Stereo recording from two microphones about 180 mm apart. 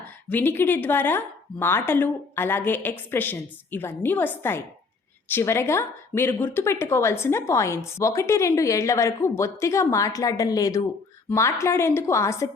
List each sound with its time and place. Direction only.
0.3 s speech: 10° left (ahead or behind)